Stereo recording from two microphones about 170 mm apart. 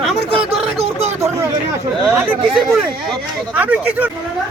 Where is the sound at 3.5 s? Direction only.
10° right (ahead or behind).